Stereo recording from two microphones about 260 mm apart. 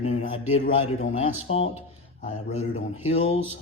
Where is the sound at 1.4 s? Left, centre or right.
Left.